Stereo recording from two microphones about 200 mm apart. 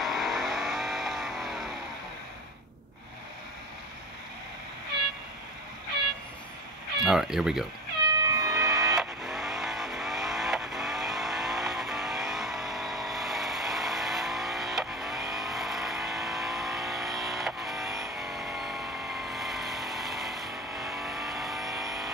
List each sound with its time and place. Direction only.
0.0 s vehicle: centre (ahead or behind)
7.1 s speech: centre (ahead or behind)
8.2 s cat: 15° right (ahead or behind)
8.5 s vehicle: 5° right (ahead or behind)